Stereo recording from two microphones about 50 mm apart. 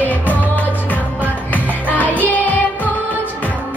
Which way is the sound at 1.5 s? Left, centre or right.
Left.